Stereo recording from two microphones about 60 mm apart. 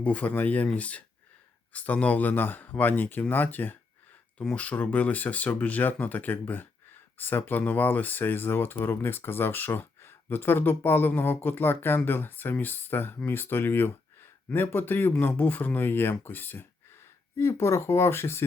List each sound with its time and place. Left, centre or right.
0.0 s speech: left
4.4 s speech: centre
17.3 s speech: left